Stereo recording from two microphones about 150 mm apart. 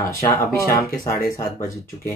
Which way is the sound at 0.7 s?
75° left (ahead or behind).